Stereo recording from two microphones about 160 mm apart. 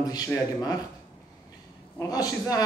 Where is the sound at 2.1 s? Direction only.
25° left (ahead or behind).